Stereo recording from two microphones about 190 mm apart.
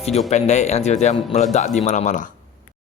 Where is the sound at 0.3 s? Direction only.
35° left (ahead or behind).